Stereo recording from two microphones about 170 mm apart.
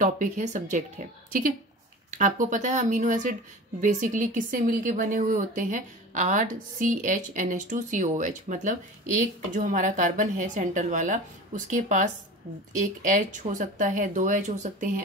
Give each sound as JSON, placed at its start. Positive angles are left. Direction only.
{"t": 0.0, "sound": "speech", "side_deg": -45}